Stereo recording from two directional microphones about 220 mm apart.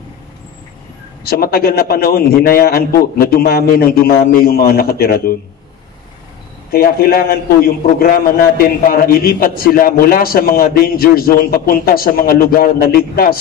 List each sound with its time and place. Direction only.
1.2 s a man's voice: 45° left (ahead or behind)
6.7 s a man's voice: 45° left (ahead or behind)